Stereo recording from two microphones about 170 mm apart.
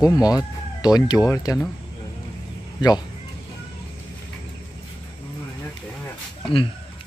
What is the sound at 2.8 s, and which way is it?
Speech, 25° left (ahead or behind).